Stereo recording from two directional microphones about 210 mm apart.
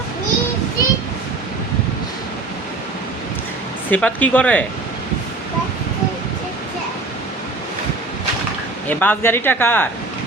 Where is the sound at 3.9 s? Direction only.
5° left (ahead or behind).